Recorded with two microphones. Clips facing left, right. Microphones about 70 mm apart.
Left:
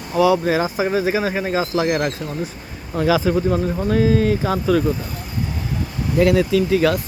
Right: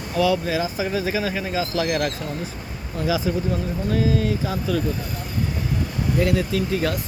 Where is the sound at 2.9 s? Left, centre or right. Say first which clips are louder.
Left 6 dB; left.